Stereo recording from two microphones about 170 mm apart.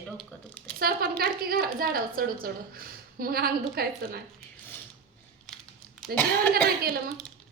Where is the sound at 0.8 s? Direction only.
65° right (ahead or behind).